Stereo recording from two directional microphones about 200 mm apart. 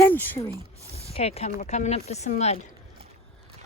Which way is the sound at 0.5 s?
15° right (ahead or behind).